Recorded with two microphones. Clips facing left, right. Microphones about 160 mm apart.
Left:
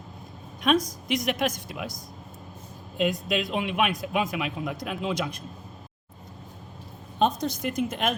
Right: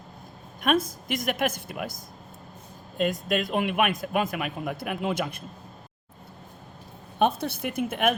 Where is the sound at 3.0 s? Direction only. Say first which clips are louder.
Even; centre (ahead or behind).